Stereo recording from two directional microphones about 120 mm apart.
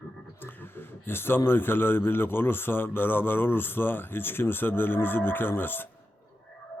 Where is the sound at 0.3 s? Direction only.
15° left (ahead or behind).